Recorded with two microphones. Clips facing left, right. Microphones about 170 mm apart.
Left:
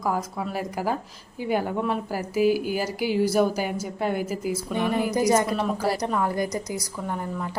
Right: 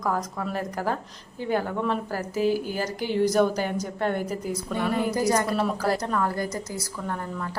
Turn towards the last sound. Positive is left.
turn(degrees=15)  # may be behind; listen again after turning